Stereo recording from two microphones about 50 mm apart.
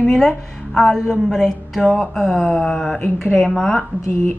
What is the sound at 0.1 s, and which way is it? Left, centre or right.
A woman's voice, centre.